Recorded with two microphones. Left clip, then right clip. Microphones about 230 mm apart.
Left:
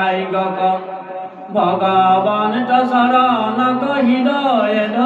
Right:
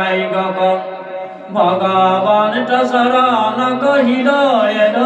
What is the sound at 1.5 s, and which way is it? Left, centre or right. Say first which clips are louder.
Mantra: right 1 dB; right.